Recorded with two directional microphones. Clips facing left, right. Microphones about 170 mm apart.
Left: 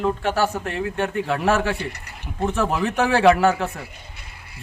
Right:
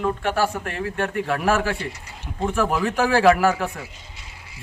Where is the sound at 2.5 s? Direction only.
25° left (ahead or behind).